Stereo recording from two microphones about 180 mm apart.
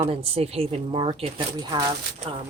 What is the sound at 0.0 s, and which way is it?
A woman's voice, 35° right (ahead or behind).